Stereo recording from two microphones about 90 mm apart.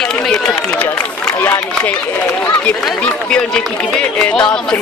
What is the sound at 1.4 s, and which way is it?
Speech, 20° left (ahead or behind).